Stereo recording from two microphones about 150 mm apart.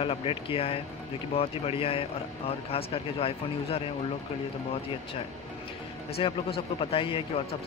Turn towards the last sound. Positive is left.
turn(degrees=40)  # may be behind; listen again after turning